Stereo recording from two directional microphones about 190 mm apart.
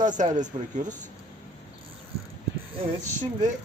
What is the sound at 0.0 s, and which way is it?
Mechanisms, 40° right (ahead or behind).